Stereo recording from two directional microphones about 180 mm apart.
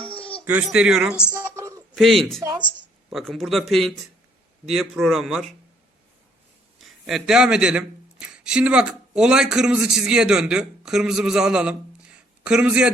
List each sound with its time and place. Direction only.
0.4 s speech: 5° right (ahead or behind)
1.3 s a sound: 20° right (ahead or behind)
2.0 s speech: centre (ahead or behind)
2.4 s speech: 20° right (ahead or behind)
2.6 s speech: centre (ahead or behind)
6.7 s speech: centre (ahead or behind)